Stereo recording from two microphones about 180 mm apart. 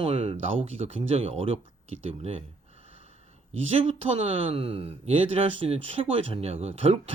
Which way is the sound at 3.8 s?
35° right (ahead or behind).